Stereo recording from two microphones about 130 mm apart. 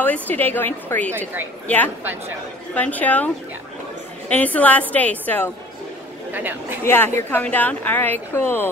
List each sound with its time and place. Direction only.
0.0 s a woman's voice: 15° left (ahead or behind)
2.7 s a woman's voice: 10° left (ahead or behind)
4.3 s a woman's voice: 10° left (ahead or behind)
6.3 s a woman's voice: 15° right (ahead or behind)
6.8 s a woman's voice: 15° left (ahead or behind)